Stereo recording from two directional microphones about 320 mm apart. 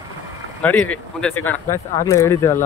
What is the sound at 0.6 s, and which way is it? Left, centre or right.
Speech, centre.